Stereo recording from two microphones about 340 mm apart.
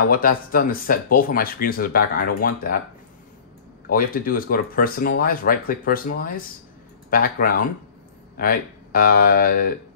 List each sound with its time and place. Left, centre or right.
0.1 s speech: left
3.9 s speech: left